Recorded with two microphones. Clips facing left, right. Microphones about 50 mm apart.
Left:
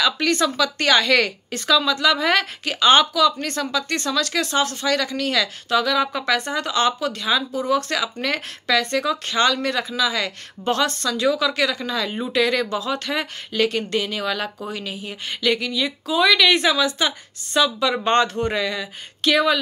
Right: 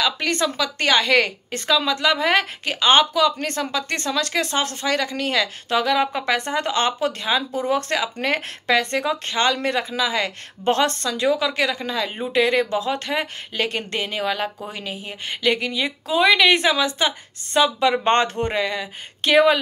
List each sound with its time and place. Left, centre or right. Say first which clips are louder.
0.0 s a woman's voice: left 2 dB; centre; by 19.6 s right